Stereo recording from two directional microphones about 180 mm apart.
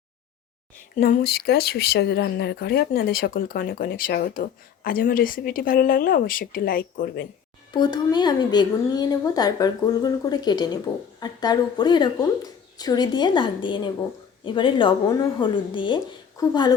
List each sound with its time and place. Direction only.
0.9 s speech: 55° left (ahead or behind)
7.7 s a woman's voice: 25° left (ahead or behind)